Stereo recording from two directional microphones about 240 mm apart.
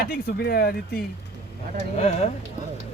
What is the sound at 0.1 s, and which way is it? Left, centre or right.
Speech, left.